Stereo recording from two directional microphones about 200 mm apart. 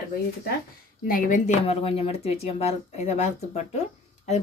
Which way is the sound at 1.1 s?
45° left (ahead or behind).